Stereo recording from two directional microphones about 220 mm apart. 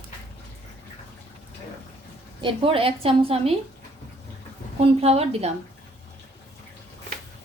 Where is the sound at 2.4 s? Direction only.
25° right (ahead or behind).